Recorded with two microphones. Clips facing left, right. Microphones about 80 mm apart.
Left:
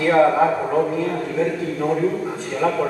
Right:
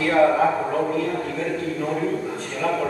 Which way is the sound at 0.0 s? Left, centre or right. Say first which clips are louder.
Left 2 dB; centre.